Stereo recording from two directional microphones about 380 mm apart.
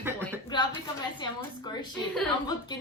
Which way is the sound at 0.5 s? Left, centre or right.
Centre.